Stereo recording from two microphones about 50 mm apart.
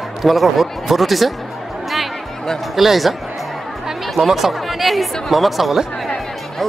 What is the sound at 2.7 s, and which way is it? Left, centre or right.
Speech, centre.